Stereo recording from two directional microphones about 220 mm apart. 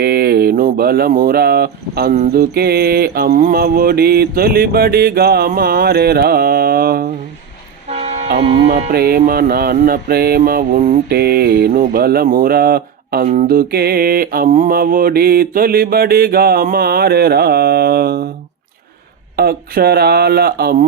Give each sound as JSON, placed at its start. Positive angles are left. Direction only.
{"t": 0.0, "sound": "speech", "side_deg": -45}
{"t": 2.1, "sound": "music", "side_deg": -35}
{"t": 7.9, "sound": "vehicle", "side_deg": -30}
{"t": 8.9, "sound": "music", "side_deg": -45}
{"t": 19.4, "sound": "music", "side_deg": -45}